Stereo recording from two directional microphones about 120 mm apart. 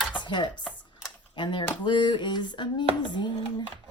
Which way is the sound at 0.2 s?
40° left (ahead or behind).